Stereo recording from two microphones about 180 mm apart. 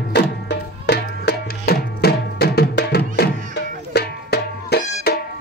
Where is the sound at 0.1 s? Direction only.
70° left (ahead or behind).